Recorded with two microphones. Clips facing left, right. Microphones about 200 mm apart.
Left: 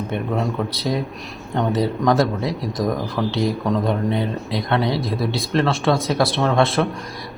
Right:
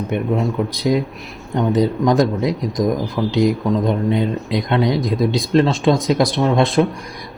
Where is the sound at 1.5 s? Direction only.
15° right (ahead or behind).